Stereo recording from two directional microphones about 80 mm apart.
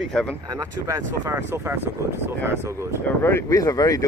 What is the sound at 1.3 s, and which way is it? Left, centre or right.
Speech, right.